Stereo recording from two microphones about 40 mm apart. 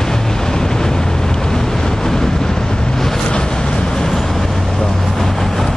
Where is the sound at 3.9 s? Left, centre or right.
Centre.